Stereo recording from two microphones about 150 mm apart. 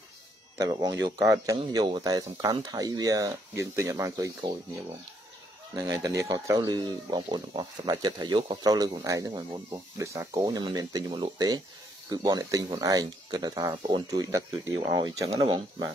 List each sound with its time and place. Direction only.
0.6 s speech: 25° right (ahead or behind)
5.8 s speech: 25° right (ahead or behind)
15.3 s speech: 40° right (ahead or behind)